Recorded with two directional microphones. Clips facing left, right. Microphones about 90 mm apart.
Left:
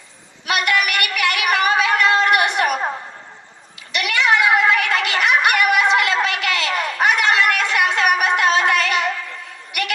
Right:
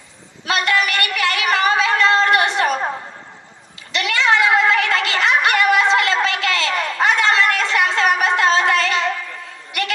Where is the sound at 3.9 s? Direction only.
30° right (ahead or behind).